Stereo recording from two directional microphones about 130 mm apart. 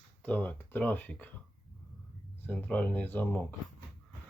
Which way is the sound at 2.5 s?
10° left (ahead or behind).